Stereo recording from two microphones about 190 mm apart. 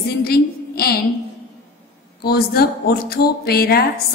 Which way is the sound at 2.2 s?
55° left (ahead or behind).